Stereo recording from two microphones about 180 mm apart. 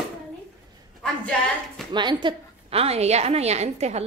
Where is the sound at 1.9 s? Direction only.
25° right (ahead or behind).